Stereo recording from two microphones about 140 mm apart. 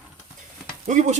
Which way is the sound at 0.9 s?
55° right (ahead or behind).